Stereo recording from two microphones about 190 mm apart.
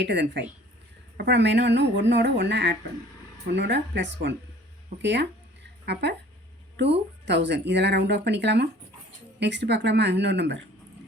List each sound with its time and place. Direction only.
0.0 s speech: 65° right (ahead or behind)
7.3 s speech: 65° right (ahead or behind)